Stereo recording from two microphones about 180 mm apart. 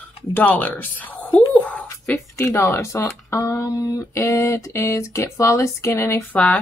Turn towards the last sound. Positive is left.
turn(degrees=15)  # may be behind; listen again after turning